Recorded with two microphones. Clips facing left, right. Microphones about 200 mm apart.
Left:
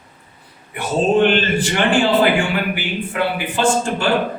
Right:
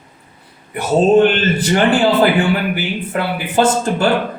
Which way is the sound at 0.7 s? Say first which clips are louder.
Right 5 dB; 40° right (ahead or behind).